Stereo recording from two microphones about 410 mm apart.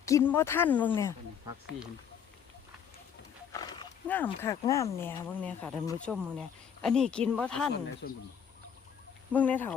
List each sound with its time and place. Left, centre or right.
0.0 s speech: centre
3.5 s speech: centre
8.0 s speech: left
9.3 s speech: centre